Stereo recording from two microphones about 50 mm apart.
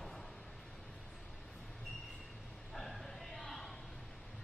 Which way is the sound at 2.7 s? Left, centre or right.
Centre.